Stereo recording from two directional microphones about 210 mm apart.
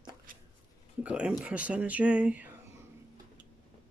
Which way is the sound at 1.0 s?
5° right (ahead or behind).